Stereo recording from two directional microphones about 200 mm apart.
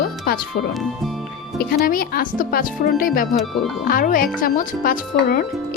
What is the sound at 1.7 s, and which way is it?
Speech, 45° left (ahead or behind).